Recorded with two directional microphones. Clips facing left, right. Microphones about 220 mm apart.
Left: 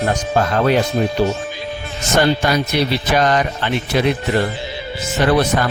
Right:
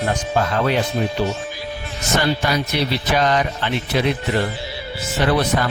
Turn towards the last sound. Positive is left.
turn(degrees=50)  # may be behind; listen again after turning